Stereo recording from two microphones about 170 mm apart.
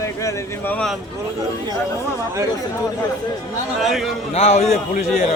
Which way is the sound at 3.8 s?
Centre (ahead or behind).